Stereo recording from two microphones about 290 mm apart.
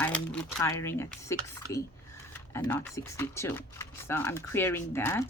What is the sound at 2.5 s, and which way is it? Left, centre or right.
Speech, centre.